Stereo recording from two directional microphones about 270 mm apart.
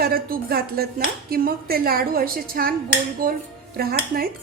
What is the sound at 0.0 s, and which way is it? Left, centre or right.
Speech, right.